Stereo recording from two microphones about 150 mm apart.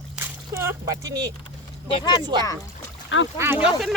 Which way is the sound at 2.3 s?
30° right (ahead or behind).